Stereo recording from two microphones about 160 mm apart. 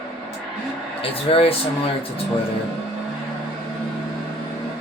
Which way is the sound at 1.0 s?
35° left (ahead or behind).